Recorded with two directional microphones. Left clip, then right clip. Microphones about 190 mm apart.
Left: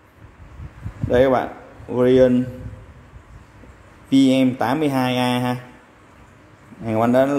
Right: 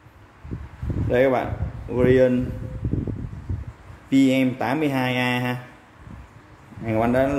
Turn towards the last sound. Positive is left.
turn(degrees=15)  # may be behind; listen again after turning